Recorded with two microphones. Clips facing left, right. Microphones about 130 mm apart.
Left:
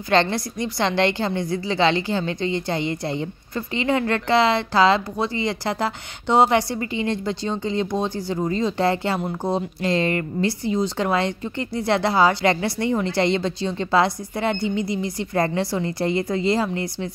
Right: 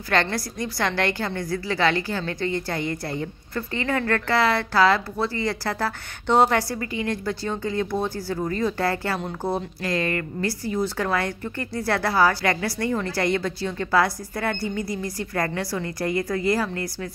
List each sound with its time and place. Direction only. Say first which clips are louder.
0.1 s a woman's voice: left 4 dB; 25° left (ahead or behind)